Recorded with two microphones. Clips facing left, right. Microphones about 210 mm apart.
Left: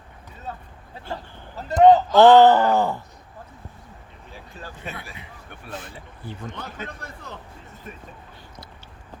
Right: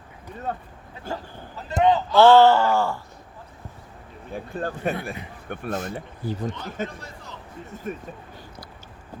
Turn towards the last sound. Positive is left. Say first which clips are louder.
# even
turn(degrees=55)  # may be behind; listen again after turning